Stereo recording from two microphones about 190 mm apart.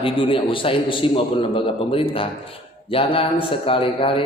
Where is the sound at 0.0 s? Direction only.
30° left (ahead or behind).